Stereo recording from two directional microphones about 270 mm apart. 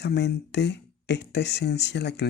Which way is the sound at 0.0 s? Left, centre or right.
Left.